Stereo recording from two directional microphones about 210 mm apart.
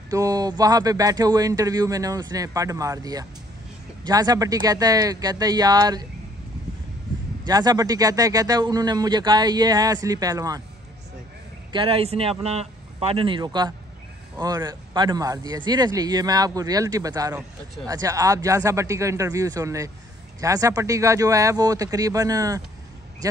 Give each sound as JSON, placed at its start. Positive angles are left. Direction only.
{"t": 0.1, "sound": "speech", "side_deg": -15}
{"t": 7.4, "sound": "speech", "side_deg": -20}
{"t": 11.7, "sound": "a man's voice", "side_deg": -25}